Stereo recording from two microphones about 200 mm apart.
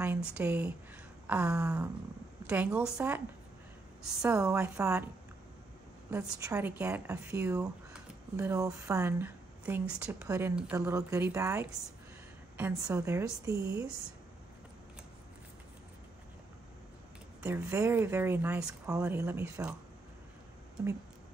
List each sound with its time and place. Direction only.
0.0 s a woman's voice: 5° right (ahead or behind)
4.3 s a woman's voice: 15° right (ahead or behind)
6.0 s a woman's voice: 15° right (ahead or behind)
17.4 s a woman's voice: 10° right (ahead or behind)